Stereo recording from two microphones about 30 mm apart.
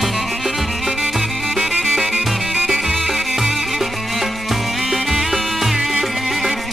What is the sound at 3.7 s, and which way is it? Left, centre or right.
Music, centre.